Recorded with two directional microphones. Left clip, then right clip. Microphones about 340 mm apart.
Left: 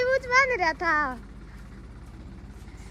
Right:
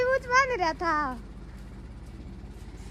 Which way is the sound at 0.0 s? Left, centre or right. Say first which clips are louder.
Left 2 dB; centre.